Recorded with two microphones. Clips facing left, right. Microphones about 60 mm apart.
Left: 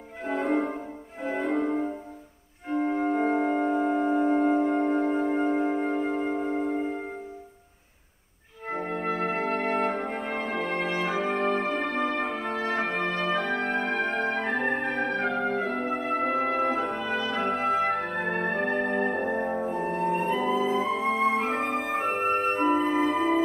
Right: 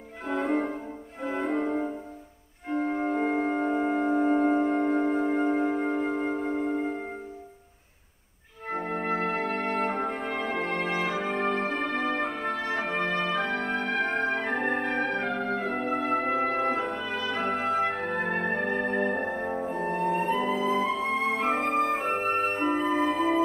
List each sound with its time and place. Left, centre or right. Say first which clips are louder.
0.3 s music: left 1 dB; centre
2.9 s music: left 3 dB; centre
8.8 s organ: left 1 dB; centre
9.2 s brass instrument: left 1 dB; centre
11.6 s music: left 1 dB; left
11.9 s music: left 1 dB; centre
15.7 s brass instrument: right 1 dB; centre
20.9 s music: left 3 dB; centre